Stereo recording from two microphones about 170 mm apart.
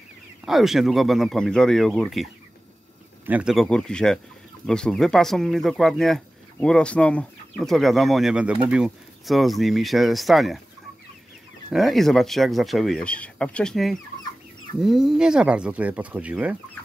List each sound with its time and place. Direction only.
0.5 s speech: centre (ahead or behind)
3.3 s speech: 5° right (ahead or behind)
11.7 s speech: centre (ahead or behind)